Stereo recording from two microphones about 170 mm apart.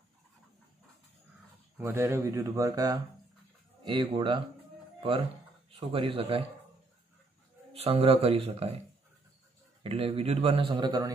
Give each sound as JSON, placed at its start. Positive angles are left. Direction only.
{"t": 1.8, "sound": "speech", "side_deg": -15}
{"t": 5.7, "sound": "a man's voice", "side_deg": -35}
{"t": 7.7, "sound": "a man's voice", "side_deg": -35}
{"t": 9.8, "sound": "a man's voice", "side_deg": -35}